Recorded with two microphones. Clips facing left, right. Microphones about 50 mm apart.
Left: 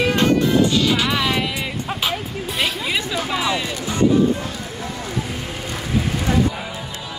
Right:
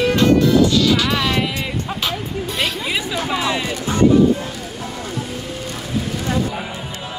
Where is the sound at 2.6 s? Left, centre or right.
Centre.